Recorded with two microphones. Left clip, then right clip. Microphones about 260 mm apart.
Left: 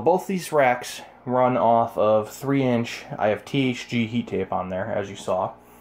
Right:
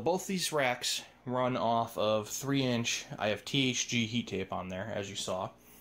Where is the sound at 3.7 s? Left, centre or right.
Centre.